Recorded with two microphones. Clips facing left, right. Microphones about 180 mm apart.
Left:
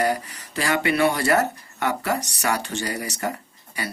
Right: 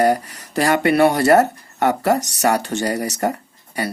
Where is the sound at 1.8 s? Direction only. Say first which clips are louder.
Right 7 dB; 40° right (ahead or behind).